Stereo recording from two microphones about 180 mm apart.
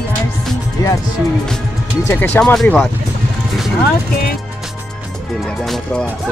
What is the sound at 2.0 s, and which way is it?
Speech, 10° left (ahead or behind).